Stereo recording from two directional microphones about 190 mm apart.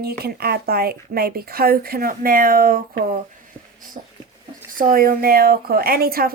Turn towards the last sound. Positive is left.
turn(degrees=-50)  # may be behind; listen again after turning